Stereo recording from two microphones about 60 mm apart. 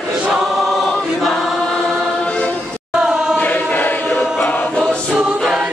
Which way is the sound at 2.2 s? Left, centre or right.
Left.